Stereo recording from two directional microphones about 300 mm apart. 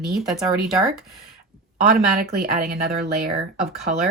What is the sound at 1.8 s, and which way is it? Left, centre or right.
Speech, right.